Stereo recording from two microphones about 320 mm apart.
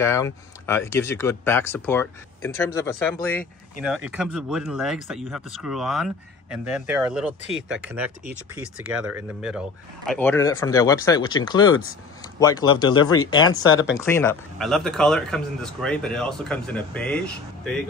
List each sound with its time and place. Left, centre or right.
0.0 s speech: centre
12.9 s speech: left
13.9 s speech: centre